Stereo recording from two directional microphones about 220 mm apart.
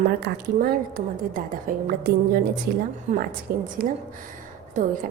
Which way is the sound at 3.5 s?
40° right (ahead or behind).